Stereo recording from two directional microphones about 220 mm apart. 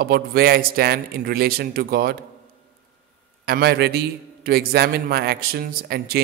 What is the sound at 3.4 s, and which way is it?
A man's voice, 45° right (ahead or behind).